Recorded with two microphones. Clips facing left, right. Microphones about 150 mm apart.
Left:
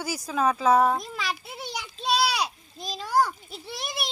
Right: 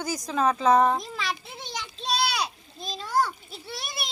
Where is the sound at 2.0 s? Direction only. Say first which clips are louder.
Left 3 dB; 10° left (ahead or behind).